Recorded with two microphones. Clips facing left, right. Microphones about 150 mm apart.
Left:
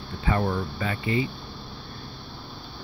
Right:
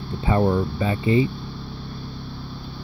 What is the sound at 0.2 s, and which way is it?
Speech, 25° right (ahead or behind).